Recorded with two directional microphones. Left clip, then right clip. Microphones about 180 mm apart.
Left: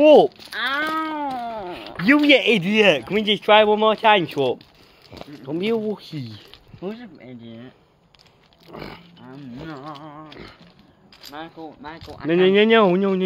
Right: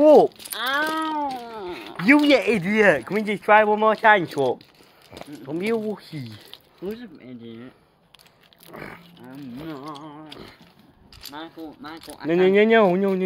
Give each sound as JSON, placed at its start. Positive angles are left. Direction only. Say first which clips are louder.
{"t": 0.0, "sound": "speech", "louder": "left 2 dB", "side_deg": 0}
{"t": 0.8, "sound": "a sound", "louder": "even", "side_deg": 5}
{"t": 2.9, "sound": "speech", "louder": "left 2 dB", "side_deg": 20}
{"t": 4.0, "sound": "speech", "louder": "even", "side_deg": 0}
{"t": 5.1, "sound": "speech", "louder": "left 2 dB", "side_deg": 15}
{"t": 7.2, "sound": "speech", "louder": "even", "side_deg": 25}
{"t": 8.6, "sound": "speech", "louder": "left 2 dB", "side_deg": 15}
{"t": 9.9, "sound": "speech", "louder": "left 1 dB", "side_deg": 40}
{"t": 11.3, "sound": "speech", "louder": "left 2 dB", "side_deg": 35}
{"t": 12.3, "sound": "speech", "louder": "left 1 dB", "side_deg": 5}